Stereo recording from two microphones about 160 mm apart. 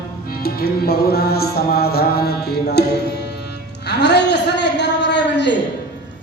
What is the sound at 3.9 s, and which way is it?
A man's voice, 90° left.